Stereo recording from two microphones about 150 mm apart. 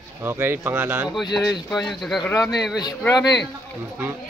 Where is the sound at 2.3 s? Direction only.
20° left (ahead or behind).